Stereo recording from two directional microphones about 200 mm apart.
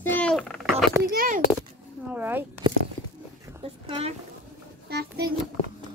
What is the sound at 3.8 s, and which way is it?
Speech, 25° right (ahead or behind).